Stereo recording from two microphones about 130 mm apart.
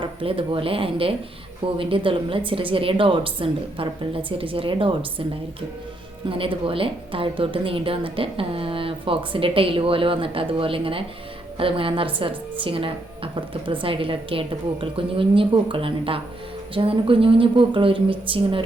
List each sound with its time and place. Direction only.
0.0 s a woman's voice: 45° right (ahead or behind)
6.2 s a woman's voice: 45° right (ahead or behind)